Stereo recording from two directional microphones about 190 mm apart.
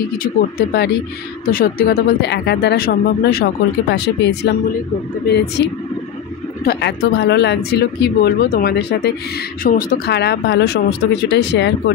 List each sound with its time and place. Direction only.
0.2 s speech: 55° left (ahead or behind)